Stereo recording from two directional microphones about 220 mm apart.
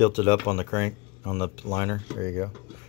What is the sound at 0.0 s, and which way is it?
Speech, 15° left (ahead or behind).